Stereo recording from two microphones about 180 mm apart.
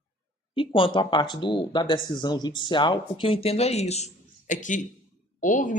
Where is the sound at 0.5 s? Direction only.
30° left (ahead or behind).